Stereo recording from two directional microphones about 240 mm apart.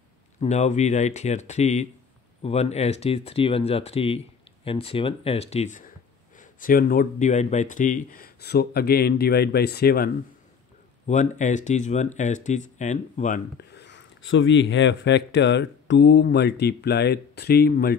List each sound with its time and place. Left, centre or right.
0.4 s speech: left